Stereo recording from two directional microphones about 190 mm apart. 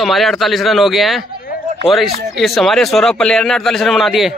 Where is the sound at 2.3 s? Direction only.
Centre (ahead or behind).